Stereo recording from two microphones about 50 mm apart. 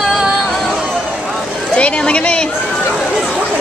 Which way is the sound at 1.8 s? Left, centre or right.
Left.